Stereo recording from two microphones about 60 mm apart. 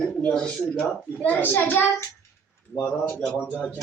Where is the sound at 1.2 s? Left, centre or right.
Left.